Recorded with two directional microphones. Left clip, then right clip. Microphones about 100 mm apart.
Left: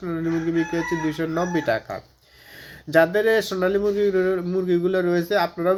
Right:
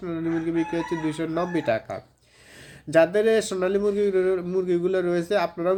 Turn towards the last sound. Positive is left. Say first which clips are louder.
# left 2 dB
turn(degrees=-20)  # may be behind; listen again after turning